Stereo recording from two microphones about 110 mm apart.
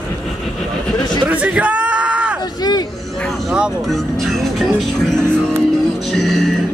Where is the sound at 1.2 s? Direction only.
15° right (ahead or behind).